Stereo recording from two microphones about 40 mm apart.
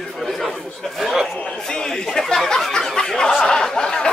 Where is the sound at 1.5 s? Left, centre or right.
Centre.